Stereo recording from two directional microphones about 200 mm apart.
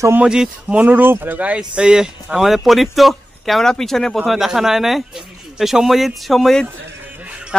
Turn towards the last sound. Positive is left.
turn(degrees=-5)  # may be behind; listen again after turning